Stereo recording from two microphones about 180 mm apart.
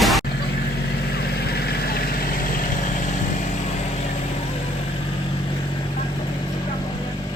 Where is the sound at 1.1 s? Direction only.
60° left (ahead or behind); by 3.1 s 45° left (ahead or behind).